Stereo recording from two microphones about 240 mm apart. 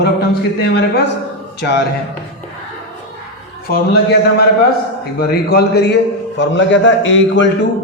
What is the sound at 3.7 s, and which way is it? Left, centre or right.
A man's voice, left.